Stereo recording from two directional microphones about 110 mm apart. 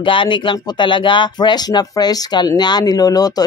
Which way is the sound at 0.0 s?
50° left (ahead or behind).